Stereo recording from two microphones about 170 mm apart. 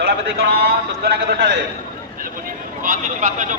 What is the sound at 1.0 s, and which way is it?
Speech, 75° right (ahead or behind).